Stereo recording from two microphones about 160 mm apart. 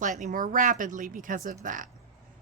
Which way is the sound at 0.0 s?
50° right (ahead or behind).